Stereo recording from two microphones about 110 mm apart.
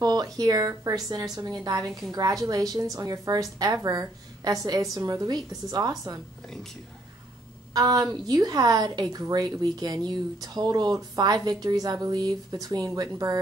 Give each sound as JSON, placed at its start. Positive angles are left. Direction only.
{"t": 0.0, "sound": "a woman's voice", "side_deg": -35}
{"t": 7.7, "sound": "a woman's voice", "side_deg": -35}